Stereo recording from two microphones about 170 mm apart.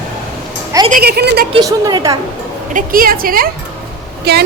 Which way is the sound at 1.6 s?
20° right (ahead or behind).